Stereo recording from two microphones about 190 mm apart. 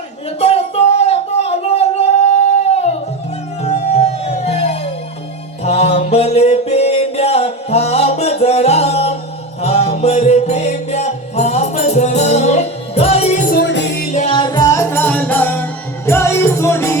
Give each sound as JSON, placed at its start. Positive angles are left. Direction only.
{"t": 0.3, "sound": "a sound", "side_deg": 35}
{"t": 2.6, "sound": "music", "side_deg": 35}
{"t": 13.5, "sound": "music", "side_deg": 65}
{"t": 14.1, "sound": "music", "side_deg": 40}
{"t": 14.3, "sound": "music", "side_deg": 20}